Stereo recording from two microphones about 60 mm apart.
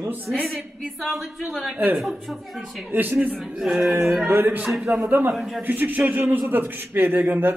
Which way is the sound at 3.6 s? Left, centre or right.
Centre.